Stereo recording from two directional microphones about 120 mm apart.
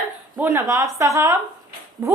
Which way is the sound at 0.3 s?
20° right (ahead or behind).